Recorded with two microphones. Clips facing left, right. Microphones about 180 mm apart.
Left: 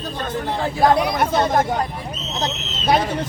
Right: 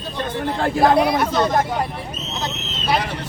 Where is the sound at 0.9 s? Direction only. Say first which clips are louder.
Right 4 dB; 55° right (ahead or behind).